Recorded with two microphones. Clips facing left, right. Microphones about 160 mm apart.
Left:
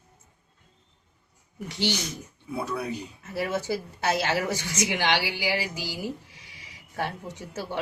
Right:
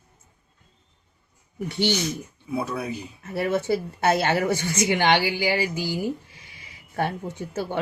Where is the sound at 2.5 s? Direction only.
5° right (ahead or behind).